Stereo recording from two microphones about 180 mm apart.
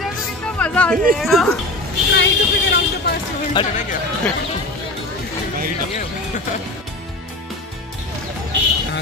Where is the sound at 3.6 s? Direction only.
25° left (ahead or behind).